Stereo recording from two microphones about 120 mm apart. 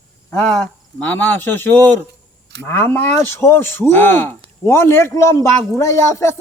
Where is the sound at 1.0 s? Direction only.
15° left (ahead or behind).